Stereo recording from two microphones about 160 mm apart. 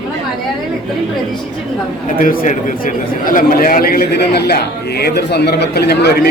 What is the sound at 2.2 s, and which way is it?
Speech, 60° left (ahead or behind).